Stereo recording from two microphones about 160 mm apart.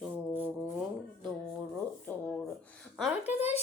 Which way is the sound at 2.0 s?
10° left (ahead or behind).